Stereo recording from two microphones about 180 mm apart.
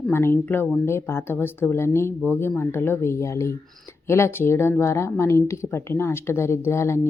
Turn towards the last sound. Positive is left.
turn(degrees=15)  # may be behind; listen again after turning